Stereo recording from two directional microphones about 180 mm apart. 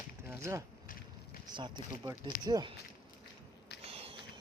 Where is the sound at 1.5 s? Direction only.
25° right (ahead or behind).